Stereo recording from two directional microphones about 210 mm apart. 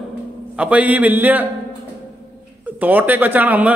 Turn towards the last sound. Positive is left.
turn(degrees=-5)  # may be behind; listen again after turning